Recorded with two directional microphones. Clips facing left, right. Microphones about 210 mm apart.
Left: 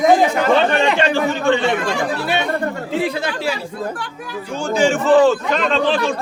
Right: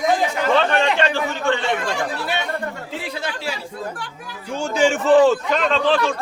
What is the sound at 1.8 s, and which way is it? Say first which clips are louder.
Speech: left 4 dB; 70° left (ahead or behind).